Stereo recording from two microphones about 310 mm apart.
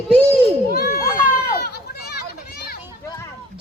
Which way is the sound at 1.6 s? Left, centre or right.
Left.